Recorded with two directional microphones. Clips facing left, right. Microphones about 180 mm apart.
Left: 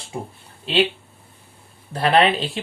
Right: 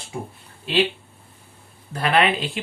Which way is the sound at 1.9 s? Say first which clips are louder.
Left 3 dB; 35° left (ahead or behind).